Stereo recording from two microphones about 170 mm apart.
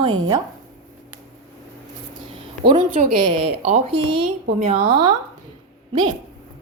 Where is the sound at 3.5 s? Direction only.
50° right (ahead or behind).